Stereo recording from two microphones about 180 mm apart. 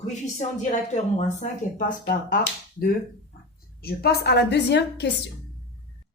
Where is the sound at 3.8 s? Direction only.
60° left (ahead or behind).